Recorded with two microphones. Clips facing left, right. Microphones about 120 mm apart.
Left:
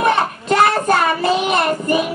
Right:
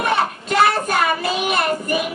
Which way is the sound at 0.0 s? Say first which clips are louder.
Left 3 dB; 30° left (ahead or behind).